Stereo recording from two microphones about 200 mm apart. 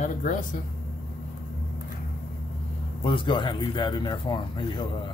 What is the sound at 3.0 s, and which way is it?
Speech, 25° left (ahead or behind).